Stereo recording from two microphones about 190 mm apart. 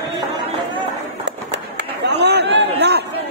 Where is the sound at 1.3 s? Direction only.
65° right (ahead or behind).